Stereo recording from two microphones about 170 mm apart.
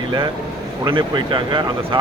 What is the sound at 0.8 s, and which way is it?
Speech, 30° right (ahead or behind).